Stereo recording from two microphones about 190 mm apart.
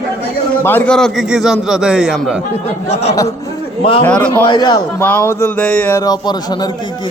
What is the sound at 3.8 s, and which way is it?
Speech, 30° left (ahead or behind).